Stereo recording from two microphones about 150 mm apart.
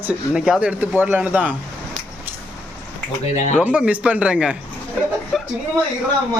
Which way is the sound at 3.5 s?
10° right (ahead or behind).